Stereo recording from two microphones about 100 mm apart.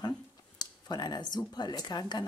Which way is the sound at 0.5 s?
45° left (ahead or behind).